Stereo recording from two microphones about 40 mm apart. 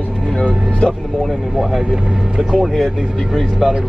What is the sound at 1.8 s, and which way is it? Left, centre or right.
Speech, centre.